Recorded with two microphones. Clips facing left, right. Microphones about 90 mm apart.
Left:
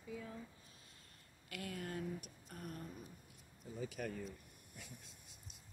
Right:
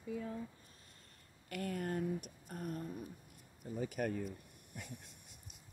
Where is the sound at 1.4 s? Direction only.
45° right (ahead or behind).